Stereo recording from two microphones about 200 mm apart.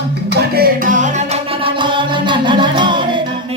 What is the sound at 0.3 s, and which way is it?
Music, 50° right (ahead or behind).